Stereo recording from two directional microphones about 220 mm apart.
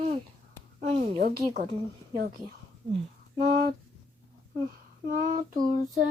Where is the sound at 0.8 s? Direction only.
30° right (ahead or behind).